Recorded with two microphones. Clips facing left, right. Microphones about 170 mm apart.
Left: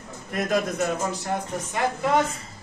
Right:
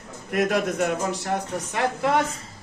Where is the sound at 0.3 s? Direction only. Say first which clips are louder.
Right 2 dB; 70° right (ahead or behind).